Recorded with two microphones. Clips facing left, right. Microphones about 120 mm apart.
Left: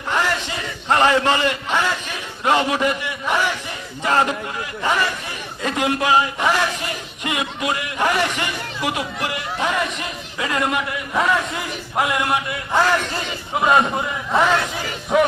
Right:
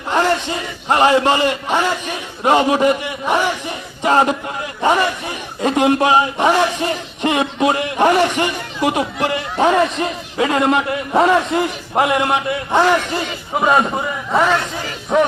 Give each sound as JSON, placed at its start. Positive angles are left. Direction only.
{"t": 0.1, "sound": "a sound", "side_deg": -30}
{"t": 0.9, "sound": "a man's voice", "side_deg": -20}
{"t": 13.6, "sound": "a man's voice", "side_deg": -5}